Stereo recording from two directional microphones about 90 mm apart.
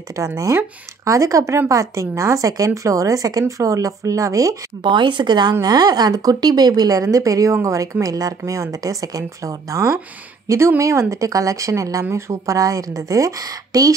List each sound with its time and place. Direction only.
0.1 s speech: 35° right (ahead or behind)
4.8 s speech: 65° right (ahead or behind); by 13.9 s 45° right (ahead or behind)